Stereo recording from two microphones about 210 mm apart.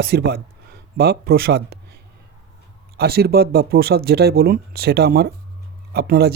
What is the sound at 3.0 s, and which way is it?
Speech, 50° right (ahead or behind).